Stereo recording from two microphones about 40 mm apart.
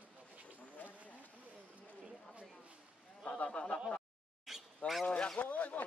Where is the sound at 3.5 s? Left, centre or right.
Left.